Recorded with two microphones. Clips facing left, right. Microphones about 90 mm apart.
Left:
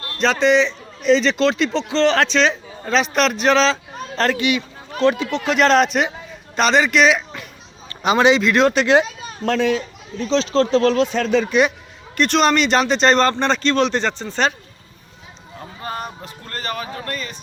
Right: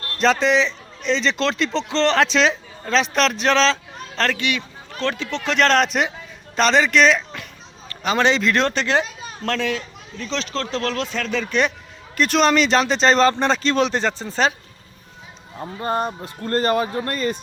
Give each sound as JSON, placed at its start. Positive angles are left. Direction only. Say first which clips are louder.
{"t": 0.2, "sound": "a man's voice", "louder": "left 2 dB", "side_deg": 0}
{"t": 12.1, "sound": "speech", "louder": "left 1 dB", "side_deg": 0}
{"t": 15.8, "sound": "speech", "louder": "right 6 dB", "side_deg": -30}